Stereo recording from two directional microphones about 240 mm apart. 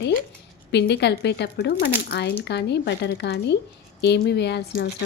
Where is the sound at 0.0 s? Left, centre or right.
Left.